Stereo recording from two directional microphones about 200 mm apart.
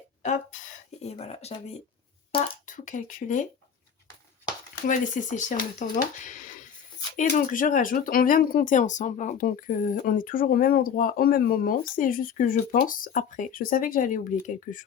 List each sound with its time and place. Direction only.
0.2 s a sound: 35° left (ahead or behind)
2.6 s speech: 40° left (ahead or behind)
4.9 s speech: 40° left (ahead or behind)